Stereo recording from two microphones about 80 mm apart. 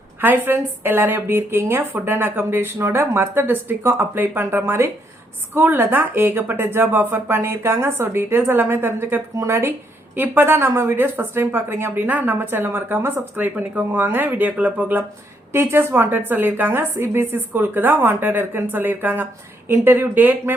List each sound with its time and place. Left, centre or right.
0.2 s a woman's voice: right
9.3 s a woman's voice: right